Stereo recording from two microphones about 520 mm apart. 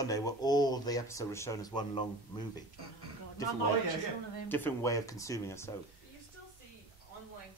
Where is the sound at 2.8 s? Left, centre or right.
Right.